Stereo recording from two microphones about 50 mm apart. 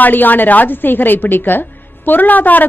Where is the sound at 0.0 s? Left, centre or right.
Left.